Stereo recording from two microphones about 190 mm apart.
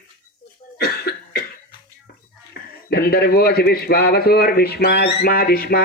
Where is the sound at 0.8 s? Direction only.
55° left (ahead or behind).